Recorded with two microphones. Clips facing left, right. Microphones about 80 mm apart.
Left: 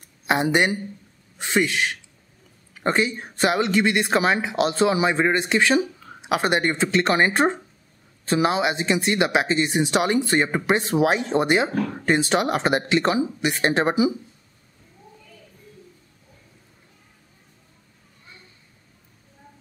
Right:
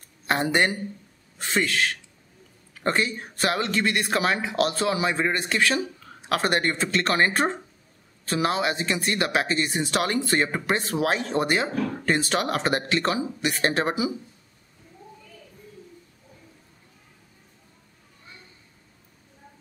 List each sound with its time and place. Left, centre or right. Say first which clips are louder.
0.3 s speech: left 3 dB; centre